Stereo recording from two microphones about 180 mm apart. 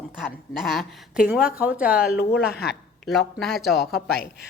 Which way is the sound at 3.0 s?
Centre (ahead or behind).